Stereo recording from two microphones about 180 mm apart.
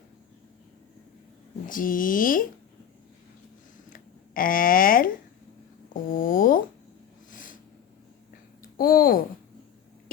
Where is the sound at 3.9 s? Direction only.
50° left (ahead or behind).